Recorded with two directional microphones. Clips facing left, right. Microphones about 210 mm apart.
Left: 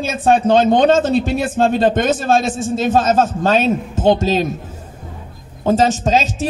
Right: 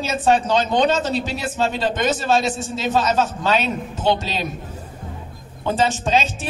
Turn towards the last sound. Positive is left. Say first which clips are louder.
# left 4 dB
turn(degrees=40)  # may be behind; listen again after turning